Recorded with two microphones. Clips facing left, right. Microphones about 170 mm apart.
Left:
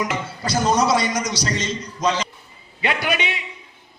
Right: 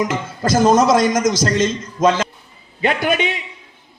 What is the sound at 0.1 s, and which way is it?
Speech, 45° right (ahead or behind).